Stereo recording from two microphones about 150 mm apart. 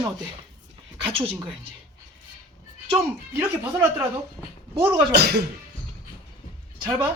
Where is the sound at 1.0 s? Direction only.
40° right (ahead or behind).